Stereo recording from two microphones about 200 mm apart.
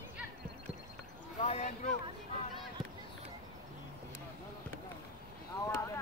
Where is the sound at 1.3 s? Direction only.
35° left (ahead or behind).